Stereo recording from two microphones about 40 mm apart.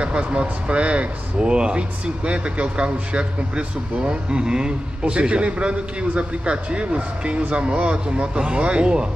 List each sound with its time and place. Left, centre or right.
0.0 s speech: right